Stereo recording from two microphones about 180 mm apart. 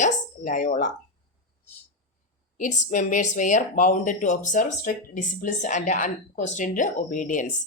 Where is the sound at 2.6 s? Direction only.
45° left (ahead or behind).